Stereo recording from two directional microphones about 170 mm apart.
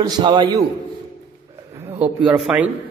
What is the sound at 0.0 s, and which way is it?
Speech, 25° right (ahead or behind).